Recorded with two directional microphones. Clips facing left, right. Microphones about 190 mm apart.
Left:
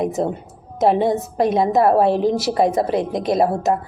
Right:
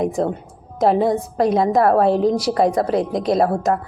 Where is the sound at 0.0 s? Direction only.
20° left (ahead or behind).